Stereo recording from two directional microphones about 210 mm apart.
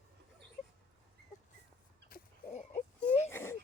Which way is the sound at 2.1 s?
45° left (ahead or behind).